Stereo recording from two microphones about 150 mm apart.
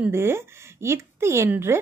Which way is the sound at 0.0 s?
15° right (ahead or behind).